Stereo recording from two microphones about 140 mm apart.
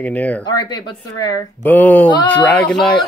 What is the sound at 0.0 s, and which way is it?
Speech, 10° left (ahead or behind).